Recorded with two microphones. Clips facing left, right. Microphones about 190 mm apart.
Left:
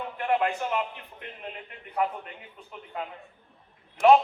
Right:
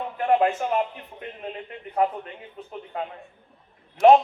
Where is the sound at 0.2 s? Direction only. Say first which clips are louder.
Right 5 dB; 35° right (ahead or behind).